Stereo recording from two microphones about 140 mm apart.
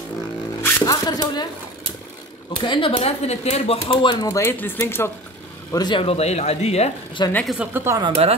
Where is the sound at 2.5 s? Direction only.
35° left (ahead or behind).